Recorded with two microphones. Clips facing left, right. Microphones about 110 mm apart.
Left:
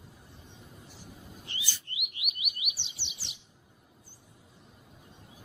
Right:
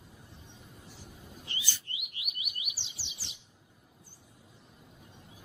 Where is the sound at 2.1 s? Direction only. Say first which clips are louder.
Left 2 dB; centre (ahead or behind).